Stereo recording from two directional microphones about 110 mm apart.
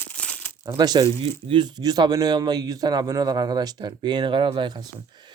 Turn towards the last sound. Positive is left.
turn(degrees=-40)  # may be behind; listen again after turning